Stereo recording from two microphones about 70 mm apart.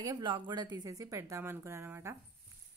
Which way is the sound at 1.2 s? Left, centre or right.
Right.